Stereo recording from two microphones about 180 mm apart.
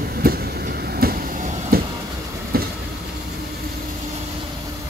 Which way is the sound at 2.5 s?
55° right (ahead or behind).